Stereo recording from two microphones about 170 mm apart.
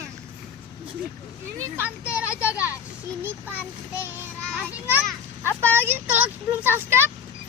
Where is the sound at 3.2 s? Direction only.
15° right (ahead or behind).